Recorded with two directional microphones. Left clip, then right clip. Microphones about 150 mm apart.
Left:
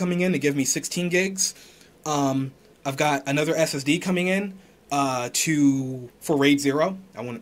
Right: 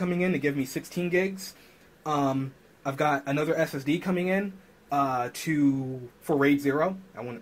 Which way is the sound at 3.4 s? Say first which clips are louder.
Left 4 dB; 30° left (ahead or behind).